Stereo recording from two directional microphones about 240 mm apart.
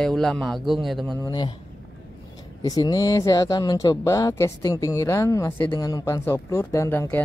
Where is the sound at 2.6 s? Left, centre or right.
Centre.